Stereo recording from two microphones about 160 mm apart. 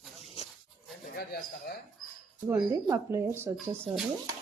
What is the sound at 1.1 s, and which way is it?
Speech, 75° left (ahead or behind).